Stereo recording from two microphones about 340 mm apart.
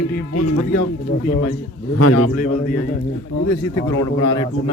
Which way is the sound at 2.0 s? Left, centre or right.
Left.